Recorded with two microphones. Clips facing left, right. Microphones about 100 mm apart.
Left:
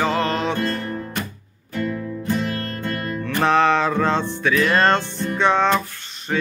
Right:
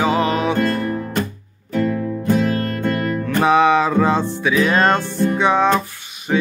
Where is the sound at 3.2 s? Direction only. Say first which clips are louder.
Right 2 dB; 5° right (ahead or behind).